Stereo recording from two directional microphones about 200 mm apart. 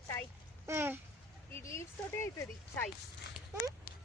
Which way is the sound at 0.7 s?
10° right (ahead or behind).